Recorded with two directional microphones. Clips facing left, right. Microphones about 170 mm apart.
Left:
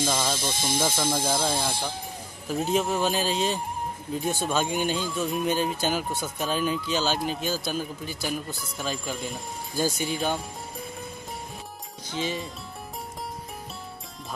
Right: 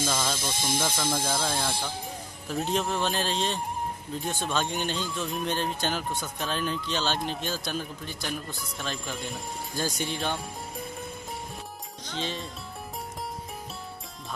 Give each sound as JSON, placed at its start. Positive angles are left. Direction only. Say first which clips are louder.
{"t": 0.0, "sound": "speech", "louder": "left 2 dB", "side_deg": 10}
{"t": 12.2, "sound": "speech", "louder": "left 4 dB", "side_deg": 5}